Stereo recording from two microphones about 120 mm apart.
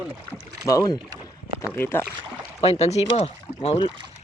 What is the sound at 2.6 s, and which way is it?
Speech, 60° left (ahead or behind).